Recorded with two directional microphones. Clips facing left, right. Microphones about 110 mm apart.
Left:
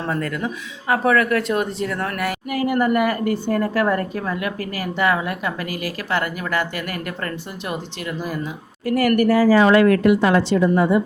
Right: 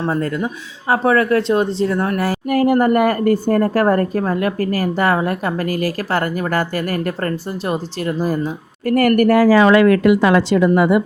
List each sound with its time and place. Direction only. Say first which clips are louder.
0.1 s speech: right 4 dB; 30° right (ahead or behind)
2.5 s a woman's voice: right 6 dB; 45° right (ahead or behind)
8.9 s speech: right 4 dB; 50° right (ahead or behind); by 11.0 s 75° right (ahead or behind)